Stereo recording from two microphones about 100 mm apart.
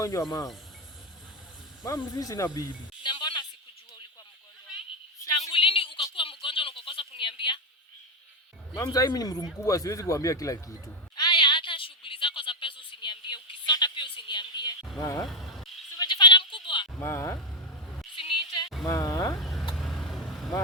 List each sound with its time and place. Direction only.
0.0 s speech: 30° left (ahead or behind)
2.1 s speech: 35° left (ahead or behind)
3.0 s music: 50° left (ahead or behind)
5.5 s a sound: 65° left (ahead or behind)
8.7 s speech: 40° left (ahead or behind)
11.2 s a sound: 50° left (ahead or behind)
14.9 s speech: 30° left (ahead or behind)
15.3 s a sound: centre (ahead or behind)
16.0 s sheep: 50° left (ahead or behind)
17.0 s speech: 30° left (ahead or behind)
18.1 s a sound: 60° left (ahead or behind)
18.9 s insect: 35° left (ahead or behind)
19.4 s vehicle: centre (ahead or behind)